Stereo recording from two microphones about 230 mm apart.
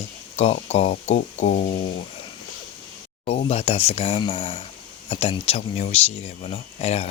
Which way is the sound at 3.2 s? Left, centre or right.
Left.